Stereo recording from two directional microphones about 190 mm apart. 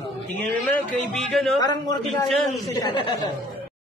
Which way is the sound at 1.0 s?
Centre (ahead or behind).